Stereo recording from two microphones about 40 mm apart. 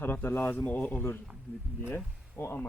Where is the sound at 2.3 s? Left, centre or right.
Left.